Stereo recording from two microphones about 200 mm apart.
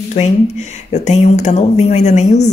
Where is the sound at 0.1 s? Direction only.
35° left (ahead or behind).